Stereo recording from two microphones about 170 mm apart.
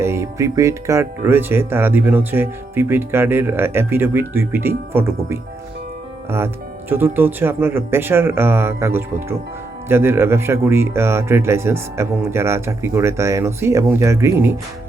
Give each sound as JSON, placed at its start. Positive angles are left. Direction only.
{"t": 0.0, "sound": "speech", "side_deg": -15}
{"t": 6.9, "sound": "speech", "side_deg": -10}